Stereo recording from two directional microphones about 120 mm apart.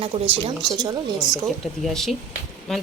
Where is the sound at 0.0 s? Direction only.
55° right (ahead or behind).